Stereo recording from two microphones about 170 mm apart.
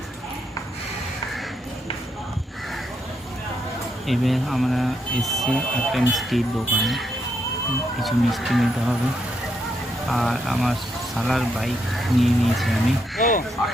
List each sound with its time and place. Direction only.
4.0 s speech: centre (ahead or behind)
8.0 s speech: centre (ahead or behind)
10.1 s speech: centre (ahead or behind)
13.2 s speech: 45° left (ahead or behind)